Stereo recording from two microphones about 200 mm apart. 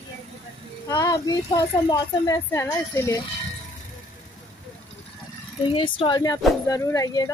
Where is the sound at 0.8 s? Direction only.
20° left (ahead or behind).